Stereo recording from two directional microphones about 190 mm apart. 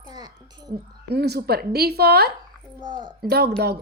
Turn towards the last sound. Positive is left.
turn(degrees=-60)  # may be behind; listen again after turning